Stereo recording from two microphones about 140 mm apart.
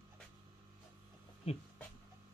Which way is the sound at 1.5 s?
45° left (ahead or behind).